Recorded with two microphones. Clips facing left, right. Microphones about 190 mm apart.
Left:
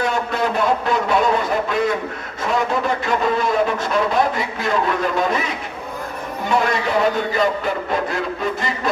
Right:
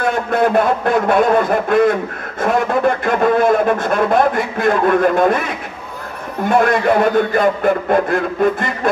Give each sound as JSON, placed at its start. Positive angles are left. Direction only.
{"t": 0.0, "sound": "a man's voice", "side_deg": -55}
{"t": 6.5, "sound": "a man's voice", "side_deg": -55}